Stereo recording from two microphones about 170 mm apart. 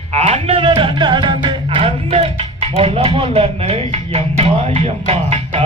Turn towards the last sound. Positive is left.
turn(degrees=-35)  # may be behind; listen again after turning